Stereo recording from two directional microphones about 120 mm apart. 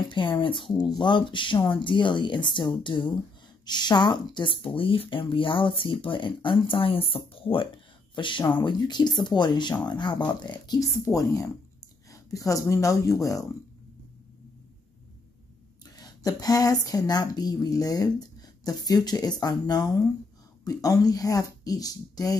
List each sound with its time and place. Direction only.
0.1 s a woman's voice: 45° left (ahead or behind)
11.1 s speech: 25° left (ahead or behind)
16.0 s a woman's voice: 30° left (ahead or behind)